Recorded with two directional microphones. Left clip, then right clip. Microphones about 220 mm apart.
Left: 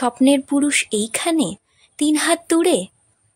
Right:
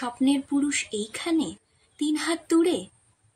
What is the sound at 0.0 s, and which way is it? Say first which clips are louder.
A woman's voice: left 9 dB; 45° left (ahead or behind).